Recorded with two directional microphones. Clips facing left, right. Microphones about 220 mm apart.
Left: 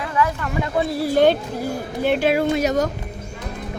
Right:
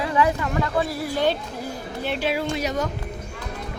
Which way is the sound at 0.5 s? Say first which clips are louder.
Left 2 dB; 20° left (ahead or behind).